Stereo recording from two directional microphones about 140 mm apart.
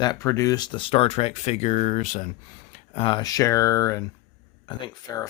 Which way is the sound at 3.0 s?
35° left (ahead or behind).